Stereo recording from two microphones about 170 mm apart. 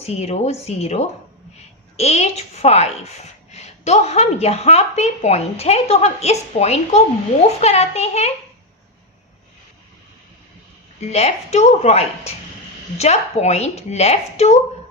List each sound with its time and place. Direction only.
0.0 s speech: 40° left (ahead or behind)
11.0 s speech: 40° left (ahead or behind)